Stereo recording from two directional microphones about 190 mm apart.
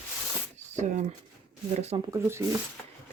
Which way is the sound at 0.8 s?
40° right (ahead or behind).